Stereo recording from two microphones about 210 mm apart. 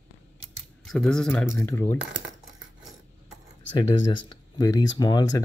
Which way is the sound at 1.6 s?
15° left (ahead or behind).